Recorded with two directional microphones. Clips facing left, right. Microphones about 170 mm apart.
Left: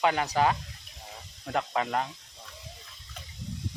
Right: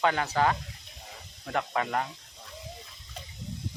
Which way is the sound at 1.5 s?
20° left (ahead or behind).